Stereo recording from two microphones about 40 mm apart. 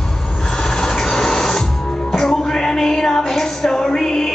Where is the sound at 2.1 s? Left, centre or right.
Centre.